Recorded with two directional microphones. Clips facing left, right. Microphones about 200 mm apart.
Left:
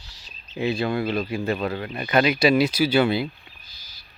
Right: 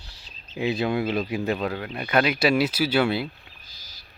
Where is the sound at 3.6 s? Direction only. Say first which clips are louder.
Right 2 dB; 40° right (ahead or behind).